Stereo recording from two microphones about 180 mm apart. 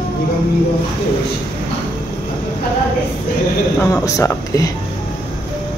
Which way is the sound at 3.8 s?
20° left (ahead or behind).